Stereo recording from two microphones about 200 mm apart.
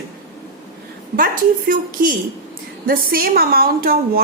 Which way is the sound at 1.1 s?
45° right (ahead or behind).